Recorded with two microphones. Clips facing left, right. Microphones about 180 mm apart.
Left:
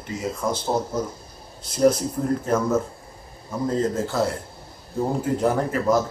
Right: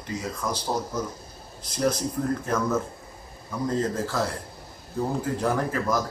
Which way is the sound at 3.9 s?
25° left (ahead or behind).